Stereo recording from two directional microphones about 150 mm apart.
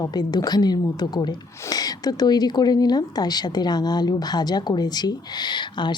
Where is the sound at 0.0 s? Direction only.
25° left (ahead or behind).